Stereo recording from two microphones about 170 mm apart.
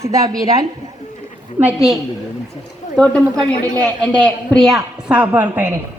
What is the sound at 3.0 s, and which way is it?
A man's voice, 5° left (ahead or behind).